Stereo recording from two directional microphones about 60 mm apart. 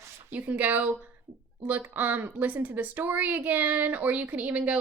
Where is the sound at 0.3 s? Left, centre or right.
Right.